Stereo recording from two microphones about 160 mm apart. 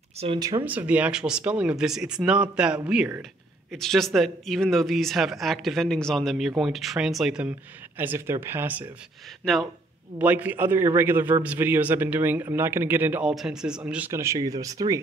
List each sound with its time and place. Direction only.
0.4 s speech: 25° right (ahead or behind)
0.7 s a man's voice: 10° right (ahead or behind)
9.4 s speech: centre (ahead or behind)
10.1 s a man's voice: 10° right (ahead or behind)